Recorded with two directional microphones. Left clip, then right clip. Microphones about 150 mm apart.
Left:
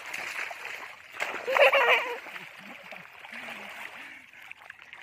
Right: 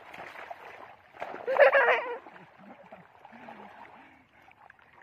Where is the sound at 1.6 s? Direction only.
10° right (ahead or behind).